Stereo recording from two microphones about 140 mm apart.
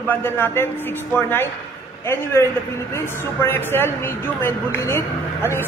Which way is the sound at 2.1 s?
20° left (ahead or behind).